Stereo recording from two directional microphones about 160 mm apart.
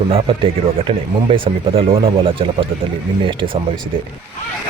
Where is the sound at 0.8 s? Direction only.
35° right (ahead or behind).